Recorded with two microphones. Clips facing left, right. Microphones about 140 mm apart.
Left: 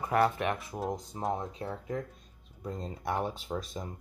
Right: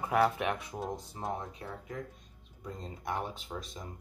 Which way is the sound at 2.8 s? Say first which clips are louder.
Left 4 dB; 35° left (ahead or behind).